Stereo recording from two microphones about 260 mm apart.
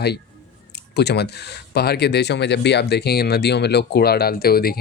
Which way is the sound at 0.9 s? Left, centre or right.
Left.